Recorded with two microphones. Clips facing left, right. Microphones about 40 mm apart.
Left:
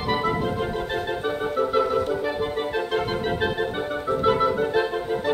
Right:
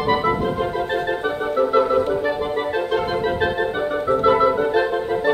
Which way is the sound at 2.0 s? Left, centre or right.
Right.